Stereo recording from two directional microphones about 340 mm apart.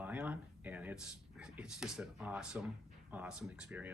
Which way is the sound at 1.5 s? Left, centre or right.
Centre.